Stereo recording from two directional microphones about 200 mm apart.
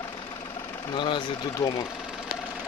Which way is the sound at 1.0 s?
25° left (ahead or behind).